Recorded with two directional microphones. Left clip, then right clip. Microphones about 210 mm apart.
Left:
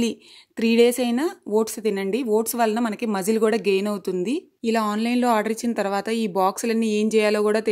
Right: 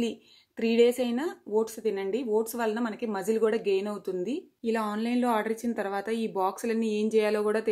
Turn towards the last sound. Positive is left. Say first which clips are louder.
# left 6 dB
turn(degrees=40)  # may be behind; listen again after turning